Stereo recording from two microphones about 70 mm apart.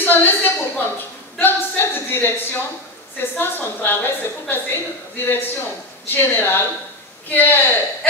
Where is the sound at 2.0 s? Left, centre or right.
Left.